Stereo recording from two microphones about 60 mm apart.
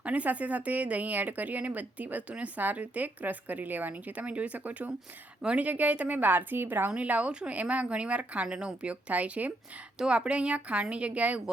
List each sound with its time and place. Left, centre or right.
0.0 s a woman's voice: right
6.9 s a woman's voice: right